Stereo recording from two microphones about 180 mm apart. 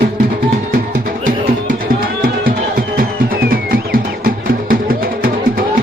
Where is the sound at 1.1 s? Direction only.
50° right (ahead or behind).